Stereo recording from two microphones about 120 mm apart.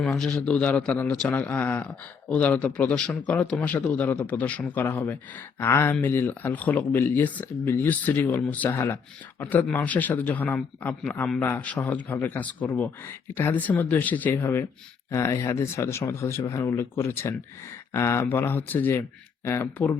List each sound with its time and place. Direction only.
0.0 s speech: 5° left (ahead or behind)